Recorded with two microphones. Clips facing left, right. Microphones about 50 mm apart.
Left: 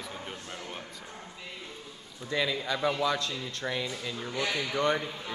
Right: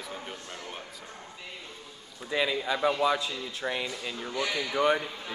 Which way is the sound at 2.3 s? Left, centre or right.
Centre.